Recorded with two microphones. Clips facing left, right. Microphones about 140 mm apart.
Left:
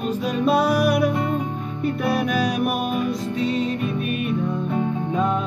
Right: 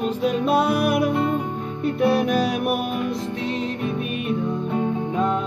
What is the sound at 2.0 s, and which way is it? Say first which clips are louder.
Music: right 4 dB; 25° right (ahead or behind).